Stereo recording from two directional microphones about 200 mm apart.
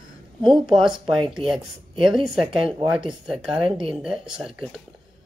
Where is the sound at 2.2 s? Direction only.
25° right (ahead or behind).